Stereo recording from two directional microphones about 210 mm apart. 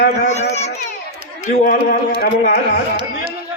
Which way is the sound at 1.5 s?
40° left (ahead or behind).